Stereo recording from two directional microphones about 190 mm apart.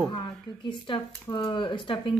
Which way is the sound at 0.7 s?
25° left (ahead or behind).